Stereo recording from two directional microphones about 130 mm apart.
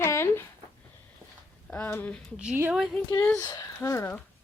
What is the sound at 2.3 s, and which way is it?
Speech, 5° right (ahead or behind).